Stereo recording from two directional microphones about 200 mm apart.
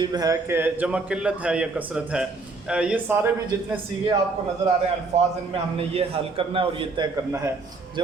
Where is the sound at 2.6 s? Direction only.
5° right (ahead or behind).